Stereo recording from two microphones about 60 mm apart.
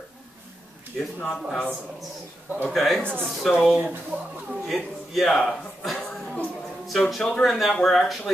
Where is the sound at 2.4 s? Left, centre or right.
Right.